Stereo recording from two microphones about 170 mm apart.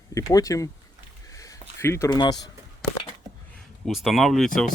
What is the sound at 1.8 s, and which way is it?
Speech, 15° left (ahead or behind).